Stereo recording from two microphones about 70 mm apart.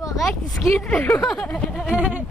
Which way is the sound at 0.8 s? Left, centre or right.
Centre.